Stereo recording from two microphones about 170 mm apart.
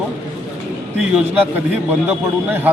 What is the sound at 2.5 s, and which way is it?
Speech, 10° right (ahead or behind).